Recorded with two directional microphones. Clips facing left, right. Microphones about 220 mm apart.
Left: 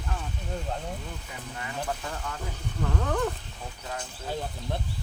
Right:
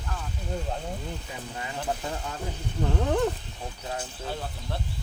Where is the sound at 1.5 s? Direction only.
25° right (ahead or behind).